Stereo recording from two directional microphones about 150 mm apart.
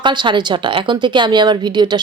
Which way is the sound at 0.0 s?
30° right (ahead or behind).